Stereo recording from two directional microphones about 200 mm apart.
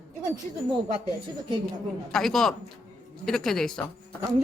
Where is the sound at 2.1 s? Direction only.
Centre (ahead or behind).